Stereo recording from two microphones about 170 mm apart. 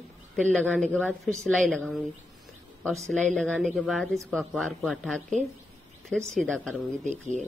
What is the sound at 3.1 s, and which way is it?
Speech, 5° left (ahead or behind).